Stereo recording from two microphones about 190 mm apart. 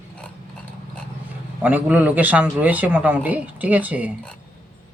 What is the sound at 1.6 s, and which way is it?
Speech, 10° right (ahead or behind).